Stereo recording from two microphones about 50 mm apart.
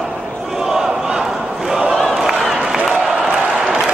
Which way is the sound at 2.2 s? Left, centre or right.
Centre.